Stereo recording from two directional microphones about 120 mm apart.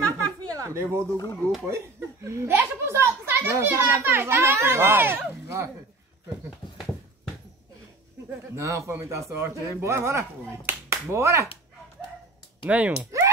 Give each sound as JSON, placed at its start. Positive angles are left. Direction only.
{"t": 0.4, "sound": "a sound", "side_deg": -25}
{"t": 1.1, "sound": "speech", "side_deg": 30}
{"t": 1.7, "sound": "speech", "side_deg": -20}
{"t": 8.5, "sound": "speech", "side_deg": -25}
{"t": 12.6, "sound": "speech", "side_deg": -10}